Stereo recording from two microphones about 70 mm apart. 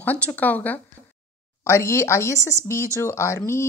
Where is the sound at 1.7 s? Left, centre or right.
Left.